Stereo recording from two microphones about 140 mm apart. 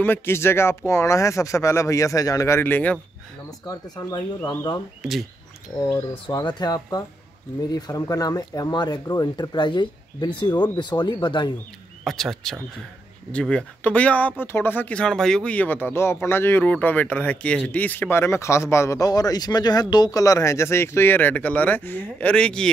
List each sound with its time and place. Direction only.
0.0 s speech: 15° left (ahead or behind)
3.4 s speech: 25° left (ahead or behind)
6.2 s speech: 30° left (ahead or behind)
12.0 s speech: centre (ahead or behind)